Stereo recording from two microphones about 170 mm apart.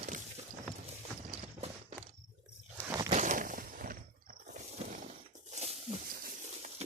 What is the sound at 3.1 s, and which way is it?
Walk, 45° right (ahead or behind).